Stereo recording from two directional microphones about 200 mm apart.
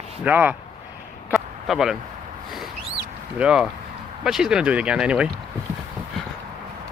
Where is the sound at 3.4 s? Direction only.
5° right (ahead or behind).